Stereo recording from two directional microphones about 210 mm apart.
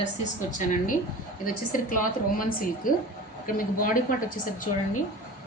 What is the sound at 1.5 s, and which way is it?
A woman's voice, 40° left (ahead or behind).